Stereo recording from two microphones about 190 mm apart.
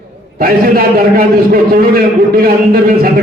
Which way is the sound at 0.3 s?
50° right (ahead or behind).